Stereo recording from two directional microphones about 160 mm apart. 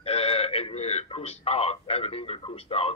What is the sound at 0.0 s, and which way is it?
Radio, 40° left (ahead or behind).